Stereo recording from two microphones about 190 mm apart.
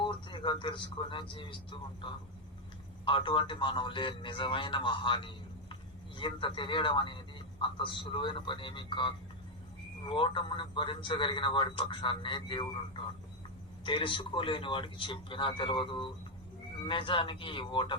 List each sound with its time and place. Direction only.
0.0 s a man's voice: 25° left (ahead or behind)
13.8 s a man's voice: 25° left (ahead or behind)